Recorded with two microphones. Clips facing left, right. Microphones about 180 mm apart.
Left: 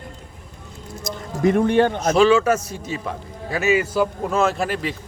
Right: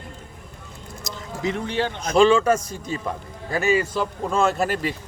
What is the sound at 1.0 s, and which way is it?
A man's voice, 50° left (ahead or behind).